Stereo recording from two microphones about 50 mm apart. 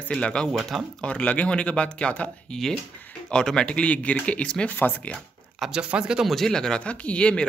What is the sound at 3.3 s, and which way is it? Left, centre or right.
Speech, centre.